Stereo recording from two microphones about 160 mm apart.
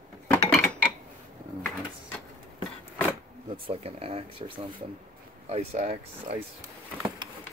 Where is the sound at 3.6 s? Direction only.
35° right (ahead or behind).